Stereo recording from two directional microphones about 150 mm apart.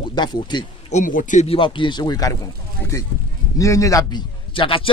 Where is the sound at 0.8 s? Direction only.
55° left (ahead or behind).